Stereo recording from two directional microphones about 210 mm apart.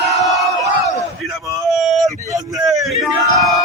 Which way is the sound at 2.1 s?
15° right (ahead or behind).